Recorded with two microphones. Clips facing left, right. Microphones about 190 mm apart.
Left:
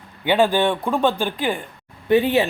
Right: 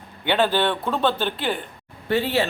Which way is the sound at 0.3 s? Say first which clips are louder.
Left 3 dB; 10° left (ahead or behind).